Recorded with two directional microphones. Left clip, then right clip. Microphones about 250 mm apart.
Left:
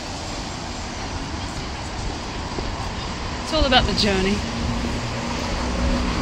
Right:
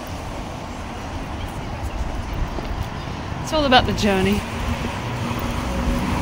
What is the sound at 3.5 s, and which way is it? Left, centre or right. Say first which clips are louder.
Speech: right 2 dB; centre.